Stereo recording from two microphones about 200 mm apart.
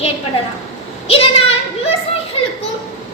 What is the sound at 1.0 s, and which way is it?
Speech, 30° left (ahead or behind).